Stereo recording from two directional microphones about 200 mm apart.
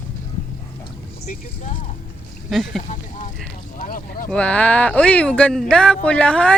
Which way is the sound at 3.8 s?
45° left (ahead or behind).